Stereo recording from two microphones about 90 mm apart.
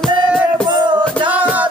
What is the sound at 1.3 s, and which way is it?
Music, 15° right (ahead or behind).